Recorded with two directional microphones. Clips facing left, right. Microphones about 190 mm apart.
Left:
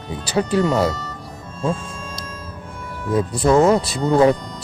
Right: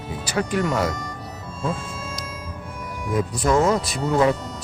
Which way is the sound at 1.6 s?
5° right (ahead or behind).